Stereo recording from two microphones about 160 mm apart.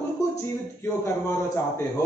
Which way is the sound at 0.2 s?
20° left (ahead or behind).